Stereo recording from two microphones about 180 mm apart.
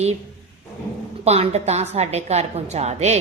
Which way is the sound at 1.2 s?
35° right (ahead or behind).